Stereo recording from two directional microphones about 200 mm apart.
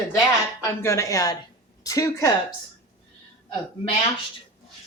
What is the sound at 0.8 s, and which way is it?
Speech, 15° left (ahead or behind).